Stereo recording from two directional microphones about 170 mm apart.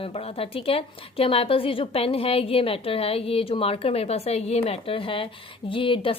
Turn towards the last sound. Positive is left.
turn(degrees=30)  # may be behind; listen again after turning